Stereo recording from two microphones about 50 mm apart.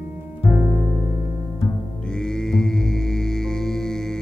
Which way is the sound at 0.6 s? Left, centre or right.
Right.